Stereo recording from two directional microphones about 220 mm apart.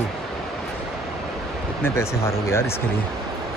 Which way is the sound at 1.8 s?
10° left (ahead or behind).